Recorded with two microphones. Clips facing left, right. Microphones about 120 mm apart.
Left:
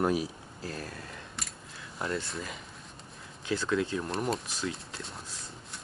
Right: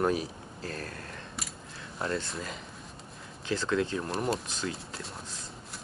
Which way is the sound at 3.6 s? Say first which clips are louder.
Right 1 dB; 35° right (ahead or behind).